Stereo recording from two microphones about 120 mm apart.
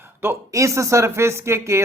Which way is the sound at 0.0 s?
20° right (ahead or behind).